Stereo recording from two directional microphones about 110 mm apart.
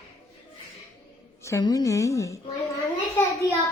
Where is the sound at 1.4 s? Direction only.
25° left (ahead or behind).